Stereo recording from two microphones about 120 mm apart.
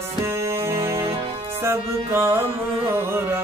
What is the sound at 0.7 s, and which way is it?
Music, 20° right (ahead or behind).